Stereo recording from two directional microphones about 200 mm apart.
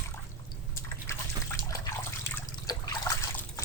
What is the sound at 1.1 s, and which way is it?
Water, 15° left (ahead or behind).